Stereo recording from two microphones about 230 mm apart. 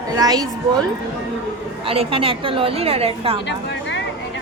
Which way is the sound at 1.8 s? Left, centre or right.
Right.